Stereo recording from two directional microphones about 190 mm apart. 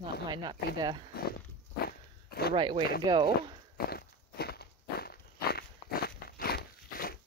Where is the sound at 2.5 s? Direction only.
25° right (ahead or behind).